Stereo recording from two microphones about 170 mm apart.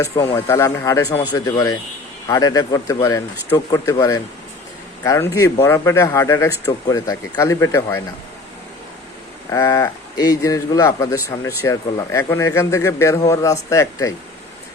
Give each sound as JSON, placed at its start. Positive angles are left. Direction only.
{"t": 0.0, "sound": "speech", "side_deg": 15}
{"t": 5.0, "sound": "speech", "side_deg": 15}
{"t": 9.5, "sound": "speech", "side_deg": 20}